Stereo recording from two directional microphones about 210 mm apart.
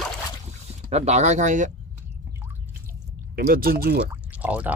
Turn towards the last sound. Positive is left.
turn(degrees=-5)  # may be behind; listen again after turning